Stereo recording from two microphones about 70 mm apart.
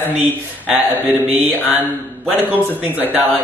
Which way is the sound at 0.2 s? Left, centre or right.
Right.